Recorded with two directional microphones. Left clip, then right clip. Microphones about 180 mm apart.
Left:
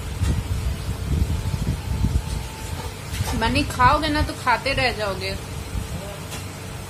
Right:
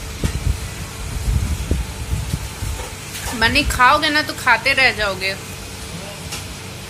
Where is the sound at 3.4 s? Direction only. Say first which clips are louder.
Right 5 dB; 10° left (ahead or behind).